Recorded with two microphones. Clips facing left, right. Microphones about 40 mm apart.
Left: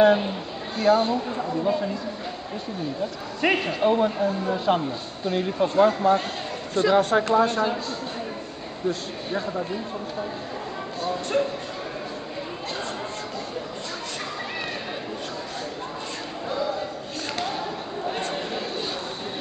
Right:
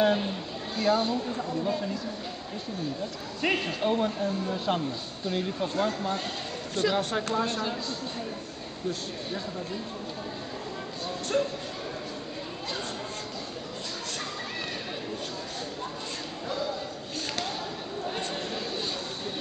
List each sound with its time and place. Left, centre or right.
0.0 s a man's voice: centre
1.1 s speech: left
1.6 s a man's voice: centre
3.4 s a man's voice: centre